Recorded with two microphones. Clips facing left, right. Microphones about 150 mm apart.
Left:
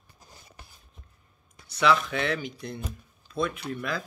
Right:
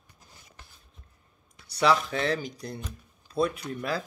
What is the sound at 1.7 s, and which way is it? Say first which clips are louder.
Speech: even; 35° right (ahead or behind).